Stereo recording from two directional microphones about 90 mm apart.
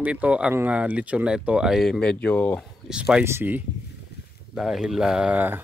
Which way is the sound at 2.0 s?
10° left (ahead or behind).